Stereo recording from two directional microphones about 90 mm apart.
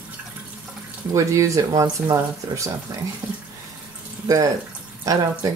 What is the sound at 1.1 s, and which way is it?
Speech, 35° right (ahead or behind).